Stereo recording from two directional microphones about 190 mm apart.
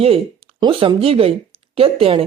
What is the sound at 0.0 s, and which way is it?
Speech, 30° right (ahead or behind).